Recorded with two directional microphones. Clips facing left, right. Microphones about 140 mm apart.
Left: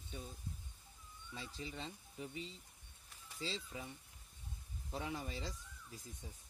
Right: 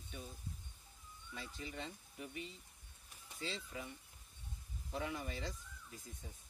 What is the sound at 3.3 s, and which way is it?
Speech, 25° left (ahead or behind).